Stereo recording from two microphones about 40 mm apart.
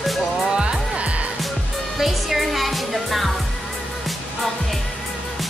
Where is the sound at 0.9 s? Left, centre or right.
Right.